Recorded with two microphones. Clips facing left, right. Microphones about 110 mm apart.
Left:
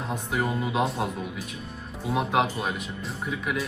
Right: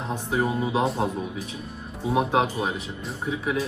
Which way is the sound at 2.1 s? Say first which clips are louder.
Right 2 dB; 25° right (ahead or behind).